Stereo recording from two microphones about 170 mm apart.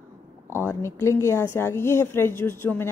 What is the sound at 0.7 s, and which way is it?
Speech, 15° left (ahead or behind).